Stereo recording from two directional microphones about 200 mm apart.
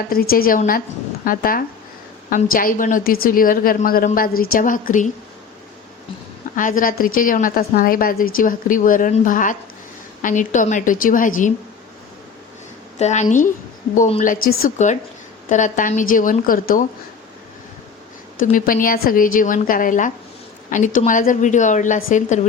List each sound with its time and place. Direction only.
0.1 s a woman's voice: 50° left (ahead or behind)
6.6 s a woman's voice: 40° left (ahead or behind)
13.0 s a woman's voice: 35° left (ahead or behind)
18.3 s a woman's voice: 45° left (ahead or behind)